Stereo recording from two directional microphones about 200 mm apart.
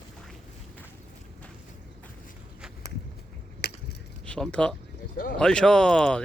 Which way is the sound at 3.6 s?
55° left (ahead or behind).